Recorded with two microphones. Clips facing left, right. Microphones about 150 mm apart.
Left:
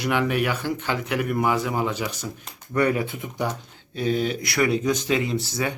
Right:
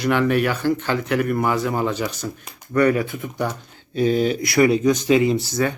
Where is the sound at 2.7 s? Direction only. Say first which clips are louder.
Right 4 dB; 20° left (ahead or behind).